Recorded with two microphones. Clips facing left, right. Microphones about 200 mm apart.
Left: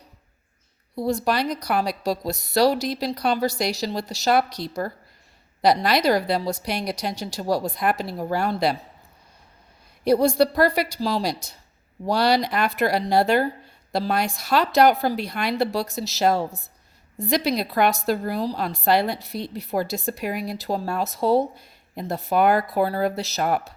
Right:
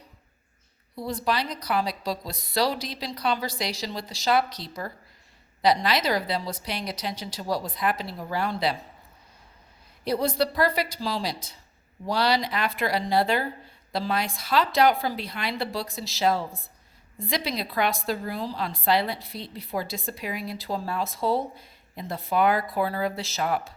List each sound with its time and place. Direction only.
0.9 s a woman's voice: 45° left (ahead or behind)
4.4 s speech: 10° left (ahead or behind)
5.6 s a woman's voice: 50° left (ahead or behind)
10.0 s a woman's voice: 50° left (ahead or behind)